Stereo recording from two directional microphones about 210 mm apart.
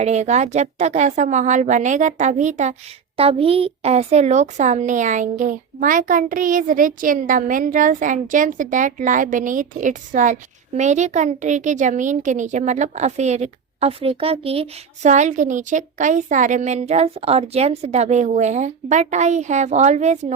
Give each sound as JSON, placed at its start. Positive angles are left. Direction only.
{"t": 0.0, "sound": "a woman's voice", "side_deg": -35}